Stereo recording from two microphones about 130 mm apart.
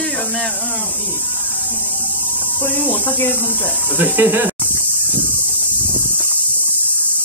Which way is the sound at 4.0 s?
15° right (ahead or behind).